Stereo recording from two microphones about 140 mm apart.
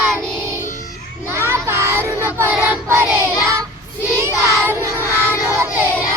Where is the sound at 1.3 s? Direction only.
20° right (ahead or behind).